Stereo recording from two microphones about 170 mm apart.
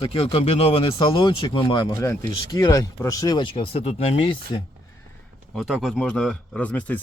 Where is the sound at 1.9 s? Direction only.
15° left (ahead or behind); by 4.6 s 35° left (ahead or behind).